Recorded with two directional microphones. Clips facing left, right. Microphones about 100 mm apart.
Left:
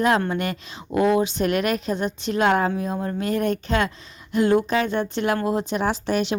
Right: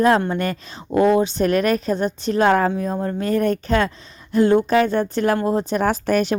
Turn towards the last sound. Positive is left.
turn(degrees=-50)  # may be behind; listen again after turning